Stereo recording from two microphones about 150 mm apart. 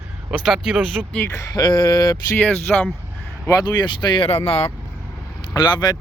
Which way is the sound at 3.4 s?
25° left (ahead or behind).